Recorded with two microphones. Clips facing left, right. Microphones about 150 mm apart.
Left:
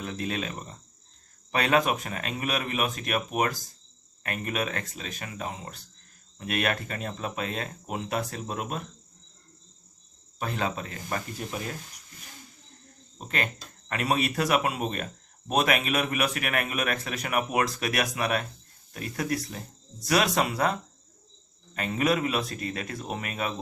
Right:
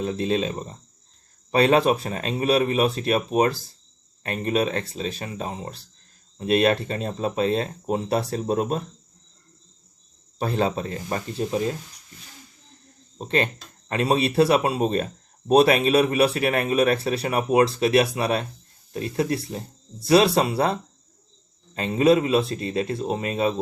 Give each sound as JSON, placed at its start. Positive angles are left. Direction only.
{"t": 0.0, "sound": "speech", "side_deg": -25}
{"t": 10.3, "sound": "speech", "side_deg": -35}
{"t": 13.1, "sound": "speech", "side_deg": -30}
{"t": 21.8, "sound": "speech", "side_deg": -25}